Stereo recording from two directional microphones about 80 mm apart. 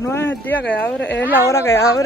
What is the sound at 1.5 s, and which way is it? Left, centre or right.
Speech, left.